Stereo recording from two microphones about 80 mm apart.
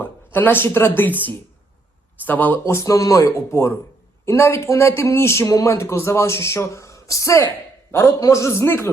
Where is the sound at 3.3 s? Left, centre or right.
Left.